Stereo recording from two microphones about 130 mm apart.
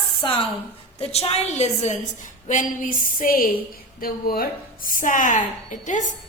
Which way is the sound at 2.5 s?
85° left.